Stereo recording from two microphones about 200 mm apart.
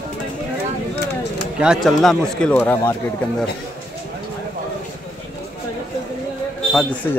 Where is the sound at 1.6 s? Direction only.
Centre (ahead or behind).